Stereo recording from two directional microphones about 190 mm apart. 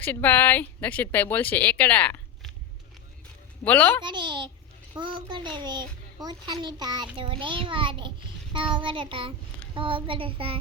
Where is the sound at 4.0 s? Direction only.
25° right (ahead or behind).